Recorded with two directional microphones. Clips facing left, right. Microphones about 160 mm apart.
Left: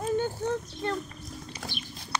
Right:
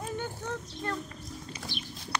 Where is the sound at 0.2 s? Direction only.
30° left (ahead or behind).